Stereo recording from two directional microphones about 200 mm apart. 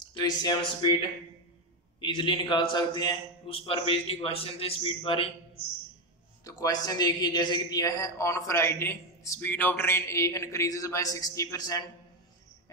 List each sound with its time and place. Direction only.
0.0 s a man's voice: 20° left (ahead or behind)
2.0 s a man's voice: 25° left (ahead or behind)
6.4 s a man's voice: 20° left (ahead or behind)